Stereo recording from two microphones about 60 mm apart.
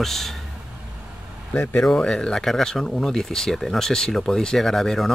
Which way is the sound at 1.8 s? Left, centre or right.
Centre.